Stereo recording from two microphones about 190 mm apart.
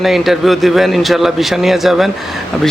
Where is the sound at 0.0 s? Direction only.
Centre (ahead or behind).